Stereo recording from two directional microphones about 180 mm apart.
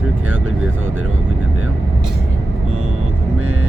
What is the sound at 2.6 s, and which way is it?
Vehicle, 35° right (ahead or behind).